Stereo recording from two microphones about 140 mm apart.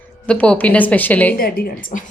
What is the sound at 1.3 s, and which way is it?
Speech, 90° left.